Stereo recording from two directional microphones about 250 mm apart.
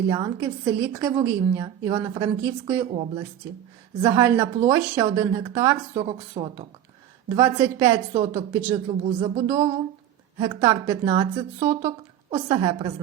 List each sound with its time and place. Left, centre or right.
0.1 s a woman's voice: centre
2.9 s a woman's voice: right
4.0 s a woman's voice: centre
7.3 s a woman's voice: centre
10.3 s a woman's voice: centre